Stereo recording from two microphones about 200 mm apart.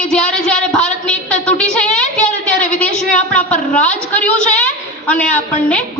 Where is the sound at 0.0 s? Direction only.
5° left (ahead or behind).